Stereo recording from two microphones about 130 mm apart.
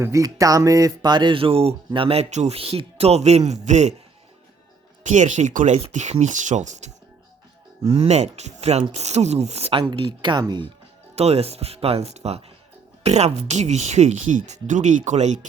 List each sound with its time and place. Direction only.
0.0 s speech: 25° right (ahead or behind); by 3.9 s 60° right (ahead or behind)
5.0 s speech: 65° right (ahead or behind)
7.9 s speech: 50° right (ahead or behind)
10.1 s speech: 35° right (ahead or behind)
11.1 s speech: 55° right (ahead or behind)